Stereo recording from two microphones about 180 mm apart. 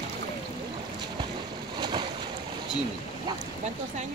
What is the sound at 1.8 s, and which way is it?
Boat, 25° right (ahead or behind).